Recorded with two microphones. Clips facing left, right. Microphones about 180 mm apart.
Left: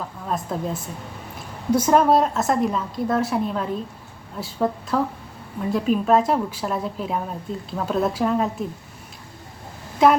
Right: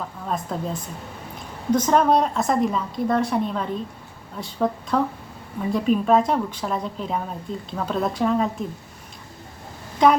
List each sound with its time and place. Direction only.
0.3 s a woman's voice: centre (ahead or behind)
10.0 s a woman's voice: 5° left (ahead or behind)